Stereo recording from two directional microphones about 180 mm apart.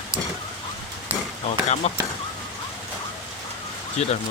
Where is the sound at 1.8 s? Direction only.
35° left (ahead or behind).